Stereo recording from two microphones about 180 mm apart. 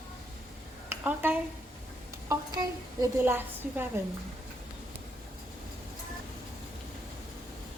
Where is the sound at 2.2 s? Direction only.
20° right (ahead or behind).